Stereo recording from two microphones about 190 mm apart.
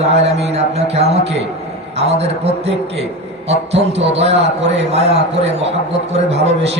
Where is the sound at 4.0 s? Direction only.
35° right (ahead or behind).